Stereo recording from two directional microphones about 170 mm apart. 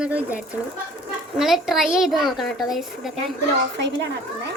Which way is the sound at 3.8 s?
90° right.